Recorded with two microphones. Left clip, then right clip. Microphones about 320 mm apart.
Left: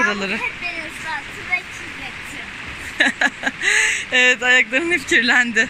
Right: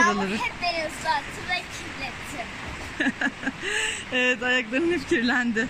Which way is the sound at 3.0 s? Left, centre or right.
Centre.